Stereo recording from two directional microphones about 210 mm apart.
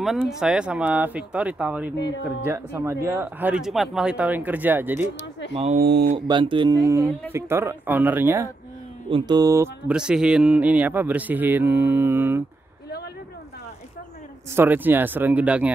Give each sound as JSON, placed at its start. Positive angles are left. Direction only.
{"t": 0.0, "sound": "speech", "side_deg": 0}
{"t": 2.4, "sound": "music", "side_deg": -10}
{"t": 5.5, "sound": "speech", "side_deg": -30}
{"t": 5.8, "sound": "speech", "side_deg": -50}
{"t": 6.2, "sound": "speech", "side_deg": -20}
{"t": 7.3, "sound": "music", "side_deg": -10}
{"t": 14.5, "sound": "music", "side_deg": -10}